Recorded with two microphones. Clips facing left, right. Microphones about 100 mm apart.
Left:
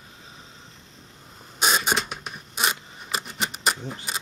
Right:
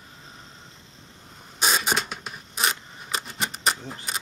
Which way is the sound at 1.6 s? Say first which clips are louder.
Left 1 dB; centre (ahead or behind).